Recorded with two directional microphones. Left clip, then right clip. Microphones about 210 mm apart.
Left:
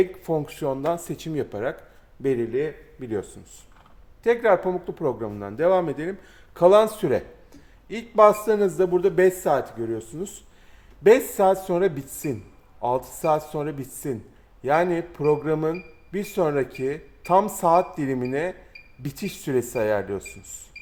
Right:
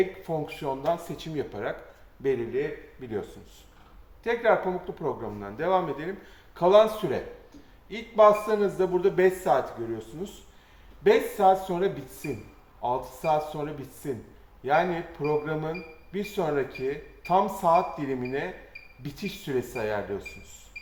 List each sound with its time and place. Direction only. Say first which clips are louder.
0.0 s speech: left 4 dB; 60° left (ahead or behind)